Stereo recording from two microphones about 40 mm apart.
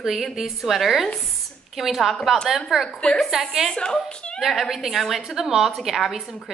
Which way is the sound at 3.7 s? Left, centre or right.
Left.